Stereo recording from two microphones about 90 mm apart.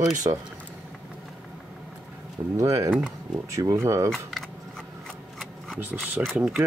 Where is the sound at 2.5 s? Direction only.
35° right (ahead or behind).